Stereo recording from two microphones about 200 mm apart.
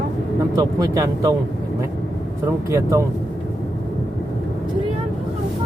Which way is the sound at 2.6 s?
15° right (ahead or behind).